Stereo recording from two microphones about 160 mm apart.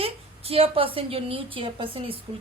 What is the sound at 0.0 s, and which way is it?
A woman's voice, 40° right (ahead or behind).